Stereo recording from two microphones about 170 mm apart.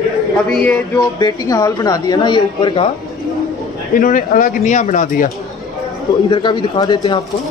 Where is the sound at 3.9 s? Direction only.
55° left (ahead or behind).